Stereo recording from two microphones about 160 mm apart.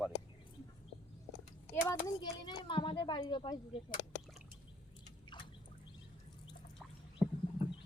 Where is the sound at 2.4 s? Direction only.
30° left (ahead or behind).